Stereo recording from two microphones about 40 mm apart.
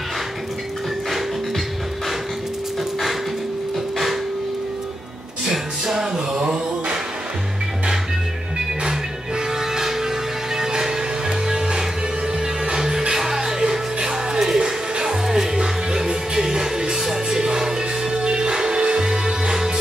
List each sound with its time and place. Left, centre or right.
5.5 s music: centre
9.5 s music: centre
15.2 s music: centre